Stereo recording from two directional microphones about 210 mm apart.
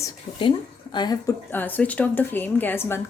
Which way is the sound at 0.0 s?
20° left (ahead or behind).